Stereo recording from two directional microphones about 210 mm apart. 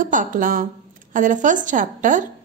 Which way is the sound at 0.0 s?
40° right (ahead or behind).